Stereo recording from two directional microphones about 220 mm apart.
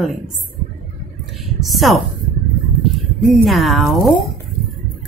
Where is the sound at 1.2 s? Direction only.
Centre (ahead or behind).